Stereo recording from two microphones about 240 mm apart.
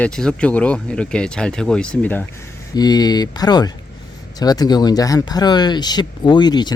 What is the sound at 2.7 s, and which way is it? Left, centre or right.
Speech, centre.